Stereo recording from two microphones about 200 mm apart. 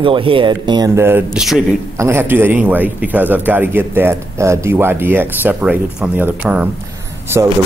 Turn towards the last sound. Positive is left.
turn(degrees=-10)  # may be behind; listen again after turning